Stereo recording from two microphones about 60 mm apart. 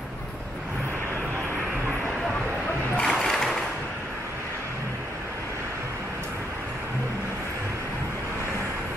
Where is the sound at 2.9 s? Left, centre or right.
Centre.